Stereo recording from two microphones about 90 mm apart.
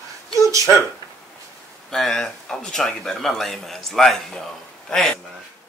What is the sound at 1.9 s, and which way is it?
Speech, 5° left (ahead or behind).